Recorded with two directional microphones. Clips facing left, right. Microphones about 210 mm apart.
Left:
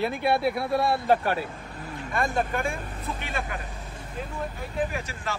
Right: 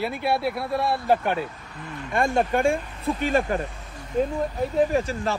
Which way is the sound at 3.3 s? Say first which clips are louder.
Right 11 dB; 40° right (ahead or behind).